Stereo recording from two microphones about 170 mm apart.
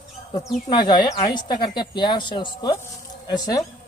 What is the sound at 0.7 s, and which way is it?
Speech, 25° left (ahead or behind).